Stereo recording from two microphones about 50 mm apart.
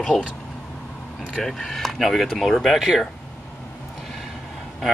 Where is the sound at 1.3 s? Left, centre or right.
Centre.